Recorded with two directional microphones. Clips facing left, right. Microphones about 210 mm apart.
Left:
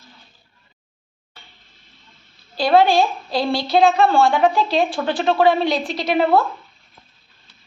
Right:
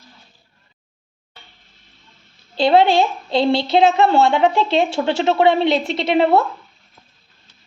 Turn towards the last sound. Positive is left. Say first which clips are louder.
# right 2 dB
turn(degrees=-25)  # may be behind; listen again after turning